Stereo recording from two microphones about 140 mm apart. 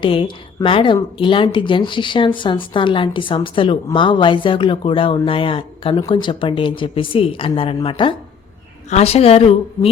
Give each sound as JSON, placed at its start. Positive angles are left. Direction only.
{"t": 0.0, "sound": "a woman's voice", "side_deg": 40}
{"t": 8.9, "sound": "a woman's voice", "side_deg": 50}